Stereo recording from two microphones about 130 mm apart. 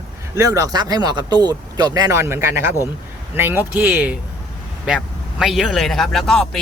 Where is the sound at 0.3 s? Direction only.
25° right (ahead or behind).